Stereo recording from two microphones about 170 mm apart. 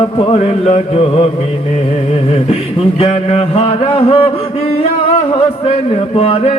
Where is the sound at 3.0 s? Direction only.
40° left (ahead or behind).